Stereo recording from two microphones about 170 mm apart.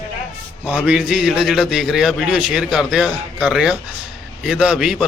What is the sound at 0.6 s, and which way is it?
A man's voice, 5° right (ahead or behind).